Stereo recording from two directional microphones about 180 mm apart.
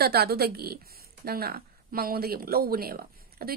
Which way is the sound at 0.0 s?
60° right (ahead or behind).